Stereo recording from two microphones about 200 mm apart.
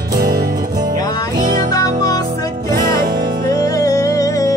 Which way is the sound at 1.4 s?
45° right (ahead or behind).